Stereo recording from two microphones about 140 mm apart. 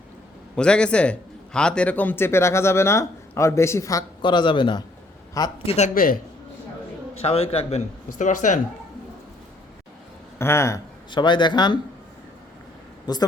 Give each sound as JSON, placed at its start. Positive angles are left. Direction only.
{"t": 0.5, "sound": "a man's voice", "side_deg": 5}
{"t": 4.2, "sound": "speech", "side_deg": 35}
{"t": 5.6, "sound": "a man's voice", "side_deg": 55}
{"t": 5.9, "sound": "a man's voice", "side_deg": 90}
{"t": 7.1, "sound": "a man's voice", "side_deg": 45}
{"t": 8.2, "sound": "speech", "side_deg": 65}
{"t": 10.3, "sound": "speech", "side_deg": 20}
{"t": 11.1, "sound": "speech", "side_deg": 35}
{"t": 13.1, "sound": "speech", "side_deg": 30}